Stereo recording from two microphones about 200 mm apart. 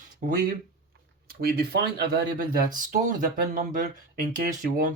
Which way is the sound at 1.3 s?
50° right (ahead or behind).